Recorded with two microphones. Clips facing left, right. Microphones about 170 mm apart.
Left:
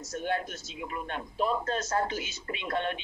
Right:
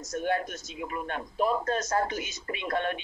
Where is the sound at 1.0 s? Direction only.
50° right (ahead or behind).